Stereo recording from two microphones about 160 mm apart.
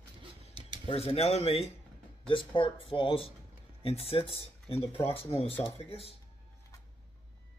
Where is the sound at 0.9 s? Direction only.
40° left (ahead or behind).